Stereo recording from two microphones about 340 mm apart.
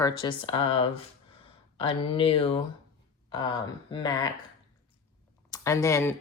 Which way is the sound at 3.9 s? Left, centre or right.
Centre.